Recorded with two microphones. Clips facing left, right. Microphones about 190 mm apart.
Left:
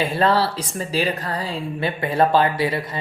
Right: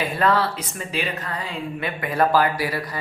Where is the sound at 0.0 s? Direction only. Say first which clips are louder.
Left 2 dB; 30° left (ahead or behind).